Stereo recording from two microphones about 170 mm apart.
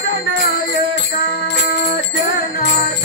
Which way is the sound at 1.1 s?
70° left (ahead or behind).